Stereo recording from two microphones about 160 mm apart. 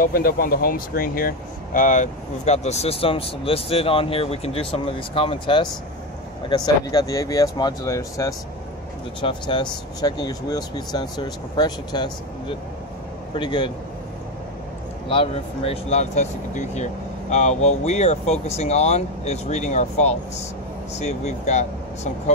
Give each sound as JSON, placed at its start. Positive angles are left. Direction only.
{"t": 0.0, "sound": "speech", "side_deg": 65}
{"t": 15.0, "sound": "speech", "side_deg": 35}